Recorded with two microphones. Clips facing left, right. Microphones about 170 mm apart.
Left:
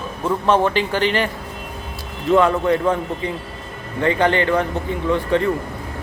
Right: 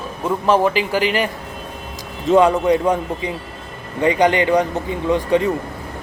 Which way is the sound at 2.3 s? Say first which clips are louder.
Right 2 dB; 15° right (ahead or behind).